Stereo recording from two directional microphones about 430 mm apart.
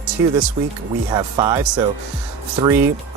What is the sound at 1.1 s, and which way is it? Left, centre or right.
Speech, centre.